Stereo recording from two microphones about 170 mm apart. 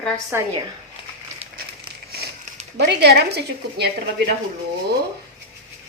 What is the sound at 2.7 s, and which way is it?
Speech, 80° right.